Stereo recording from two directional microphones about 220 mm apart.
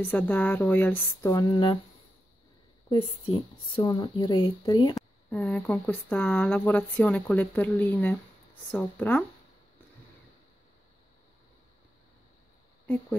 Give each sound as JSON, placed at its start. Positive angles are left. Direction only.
{"t": 0.0, "sound": "speech", "side_deg": 10}
{"t": 3.7, "sound": "speech", "side_deg": 20}
{"t": 5.4, "sound": "speech", "side_deg": 5}